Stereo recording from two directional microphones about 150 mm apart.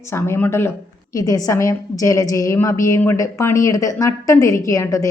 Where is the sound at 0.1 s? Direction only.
15° left (ahead or behind).